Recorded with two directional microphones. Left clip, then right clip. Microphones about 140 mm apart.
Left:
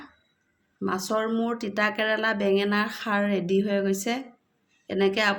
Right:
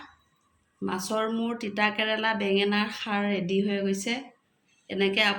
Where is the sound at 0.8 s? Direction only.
75° left (ahead or behind); by 4.3 s 90° left.